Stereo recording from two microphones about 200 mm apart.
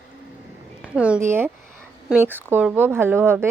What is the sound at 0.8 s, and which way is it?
A woman's voice, 5° right (ahead or behind).